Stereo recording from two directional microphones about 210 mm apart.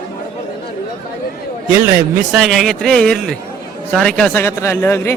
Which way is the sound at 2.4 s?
Centre (ahead or behind).